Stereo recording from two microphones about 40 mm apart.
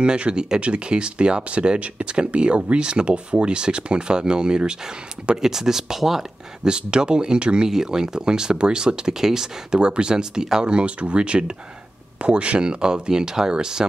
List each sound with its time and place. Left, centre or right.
0.0 s speech: right
5.4 s speech: centre
6.6 s speech: right
10.6 s speech: right